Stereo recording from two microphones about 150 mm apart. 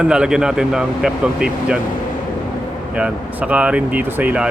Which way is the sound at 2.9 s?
10° right (ahead or behind).